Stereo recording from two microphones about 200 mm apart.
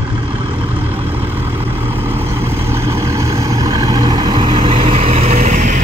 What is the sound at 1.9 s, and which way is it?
Vehicle, 10° right (ahead or behind).